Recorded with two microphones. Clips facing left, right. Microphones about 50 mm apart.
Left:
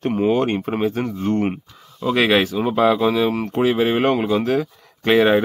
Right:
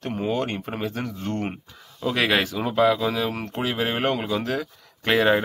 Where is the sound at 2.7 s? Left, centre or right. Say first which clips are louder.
Left 2 dB; left.